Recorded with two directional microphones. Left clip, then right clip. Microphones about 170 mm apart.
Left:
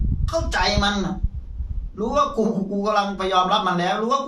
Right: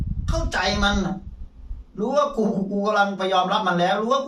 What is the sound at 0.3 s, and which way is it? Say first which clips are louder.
Speech: left 2 dB; 5° right (ahead or behind).